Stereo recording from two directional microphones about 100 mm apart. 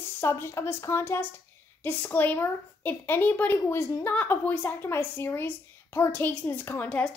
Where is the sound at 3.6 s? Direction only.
30° left (ahead or behind).